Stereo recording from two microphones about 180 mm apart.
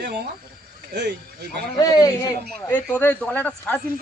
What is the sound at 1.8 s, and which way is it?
Speech, 20° left (ahead or behind).